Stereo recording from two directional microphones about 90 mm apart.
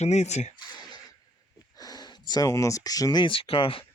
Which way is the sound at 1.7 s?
45° left (ahead or behind).